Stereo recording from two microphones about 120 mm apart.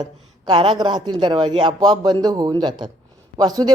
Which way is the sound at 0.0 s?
40° right (ahead or behind).